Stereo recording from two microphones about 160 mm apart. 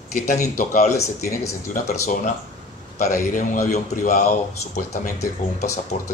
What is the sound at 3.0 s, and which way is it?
A man's voice, 60° left (ahead or behind).